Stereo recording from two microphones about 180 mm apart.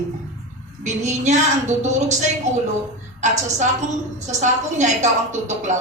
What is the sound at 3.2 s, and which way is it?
A woman's voice, 40° right (ahead or behind).